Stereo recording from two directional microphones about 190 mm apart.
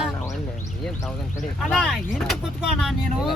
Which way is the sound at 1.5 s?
5° left (ahead or behind).